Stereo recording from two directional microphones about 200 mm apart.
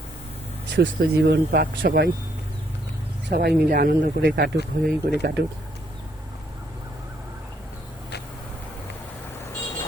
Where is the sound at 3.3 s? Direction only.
50° right (ahead or behind).